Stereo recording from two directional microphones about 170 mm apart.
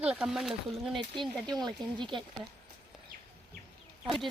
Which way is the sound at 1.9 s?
30° right (ahead or behind).